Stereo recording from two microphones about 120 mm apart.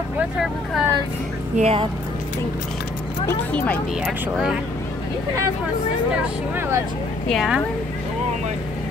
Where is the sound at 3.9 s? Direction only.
Centre (ahead or behind).